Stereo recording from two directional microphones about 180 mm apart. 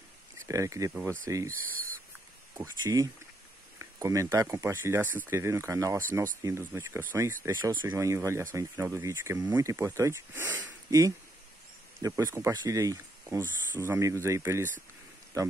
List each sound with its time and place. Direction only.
0.5 s speech: 20° right (ahead or behind)
1.5 s speech: 50° right (ahead or behind)
2.5 s speech: 15° right (ahead or behind)